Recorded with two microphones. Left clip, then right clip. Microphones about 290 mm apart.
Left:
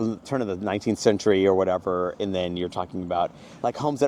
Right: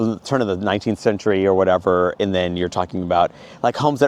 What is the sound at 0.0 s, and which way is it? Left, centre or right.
Speech, right.